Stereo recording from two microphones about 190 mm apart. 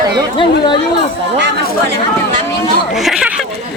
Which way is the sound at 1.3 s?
65° right (ahead or behind).